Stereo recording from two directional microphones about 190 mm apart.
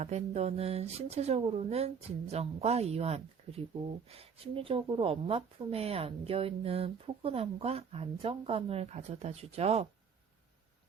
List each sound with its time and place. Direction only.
0.0 s speech: 35° right (ahead or behind)